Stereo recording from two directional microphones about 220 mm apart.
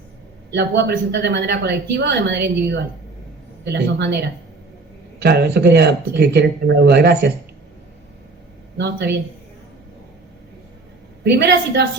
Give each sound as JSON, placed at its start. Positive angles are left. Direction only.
{"t": 0.5, "sound": "speech", "side_deg": -50}
{"t": 8.8, "sound": "speech", "side_deg": -50}
{"t": 11.2, "sound": "speech", "side_deg": -50}